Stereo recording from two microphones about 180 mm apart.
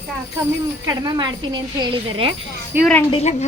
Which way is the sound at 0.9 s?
20° right (ahead or behind).